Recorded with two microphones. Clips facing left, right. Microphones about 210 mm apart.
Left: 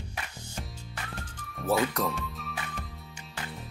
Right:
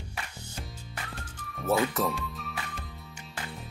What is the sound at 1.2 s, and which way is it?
Music, 5° right (ahead or behind).